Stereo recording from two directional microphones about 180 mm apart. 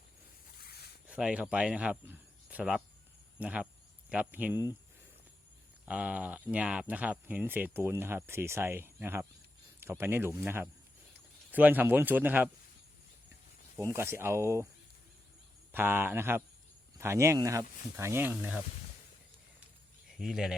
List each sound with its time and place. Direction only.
0.6 s a sound: 60° left (ahead or behind)
1.0 s speech: 5° right (ahead or behind)
5.8 s speech: 5° right (ahead or behind)
13.7 s speech: 15° right (ahead or behind)
15.7 s speech: 10° right (ahead or behind)
20.1 s speech: centre (ahead or behind)